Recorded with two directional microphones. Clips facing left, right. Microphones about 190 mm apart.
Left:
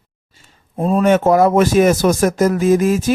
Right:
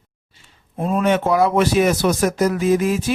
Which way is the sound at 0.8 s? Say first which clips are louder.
Left 4 dB; 35° left (ahead or behind).